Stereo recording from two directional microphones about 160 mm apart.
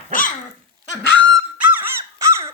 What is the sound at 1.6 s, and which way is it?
Dog, 10° right (ahead or behind).